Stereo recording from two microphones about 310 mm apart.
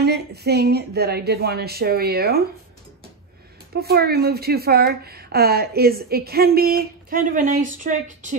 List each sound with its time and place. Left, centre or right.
0.0 s a woman's voice: right
3.7 s a woman's voice: right